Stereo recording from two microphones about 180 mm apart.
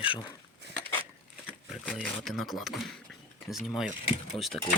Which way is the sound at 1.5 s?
5° right (ahead or behind).